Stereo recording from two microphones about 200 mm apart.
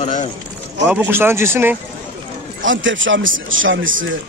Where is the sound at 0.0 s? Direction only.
40° left (ahead or behind).